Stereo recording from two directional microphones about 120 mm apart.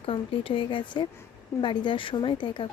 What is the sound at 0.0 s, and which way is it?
Speech, 50° left (ahead or behind).